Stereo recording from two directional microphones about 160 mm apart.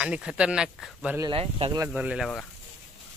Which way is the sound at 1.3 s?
35° right (ahead or behind).